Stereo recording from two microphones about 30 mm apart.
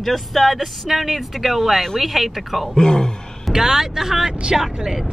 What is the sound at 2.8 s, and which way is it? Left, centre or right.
Speech, left.